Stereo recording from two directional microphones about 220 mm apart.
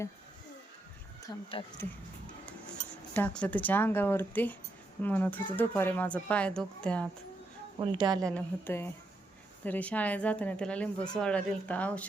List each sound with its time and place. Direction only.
1.3 s speech: 15° left (ahead or behind)
3.2 s speech: 5° left (ahead or behind)
7.8 s a woman's voice: 20° right (ahead or behind)
8.2 s a woman's voice: 5° left (ahead or behind)